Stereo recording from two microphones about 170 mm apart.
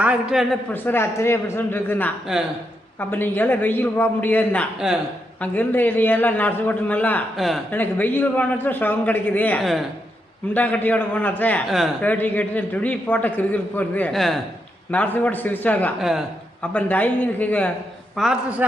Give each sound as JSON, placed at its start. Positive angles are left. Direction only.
{"t": 0.0, "sound": "a man's voice", "side_deg": -5}
{"t": 0.7, "sound": "a man's voice", "side_deg": 15}
{"t": 4.8, "sound": "a man's voice", "side_deg": -5}
{"t": 5.4, "sound": "a man's voice", "side_deg": 10}
{"t": 7.7, "sound": "a man's voice", "side_deg": 10}
{"t": 16.0, "sound": "a man's voice", "side_deg": 0}
{"t": 16.7, "sound": "a man's voice", "side_deg": 10}
{"t": 18.2, "sound": "a man's voice", "side_deg": -5}